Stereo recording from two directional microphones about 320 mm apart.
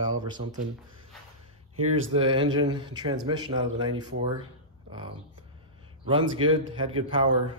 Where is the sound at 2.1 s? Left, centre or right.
Centre.